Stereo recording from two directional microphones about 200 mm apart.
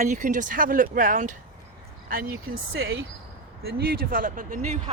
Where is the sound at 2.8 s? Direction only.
60° right (ahead or behind).